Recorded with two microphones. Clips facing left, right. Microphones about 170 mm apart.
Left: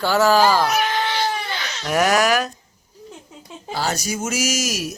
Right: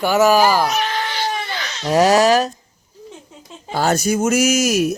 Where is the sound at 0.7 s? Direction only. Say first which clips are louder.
Even; 10° left (ahead or behind).